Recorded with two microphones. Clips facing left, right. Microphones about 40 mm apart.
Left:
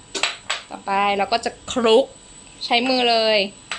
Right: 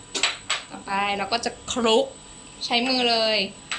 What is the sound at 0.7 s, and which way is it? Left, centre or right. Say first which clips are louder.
A woman's voice: left 7 dB; centre.